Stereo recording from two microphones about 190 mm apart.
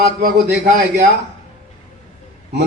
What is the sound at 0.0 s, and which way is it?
A man's voice, 55° right (ahead or behind).